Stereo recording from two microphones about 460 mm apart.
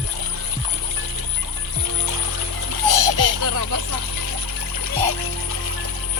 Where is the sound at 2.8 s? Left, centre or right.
Right.